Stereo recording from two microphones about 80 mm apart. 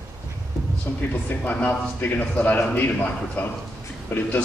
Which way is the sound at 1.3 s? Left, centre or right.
Left.